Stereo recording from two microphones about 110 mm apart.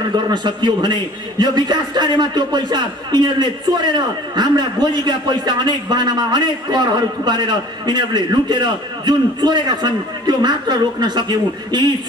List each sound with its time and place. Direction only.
0.1 s a man's voice: 40° right (ahead or behind)